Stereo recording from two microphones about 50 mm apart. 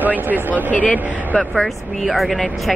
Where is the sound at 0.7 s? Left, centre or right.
Left.